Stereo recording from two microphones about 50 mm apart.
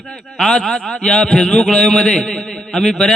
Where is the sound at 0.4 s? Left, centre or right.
Centre.